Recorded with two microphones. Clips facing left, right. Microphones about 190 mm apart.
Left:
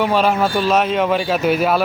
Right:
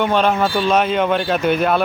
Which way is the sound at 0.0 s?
5° left (ahead or behind).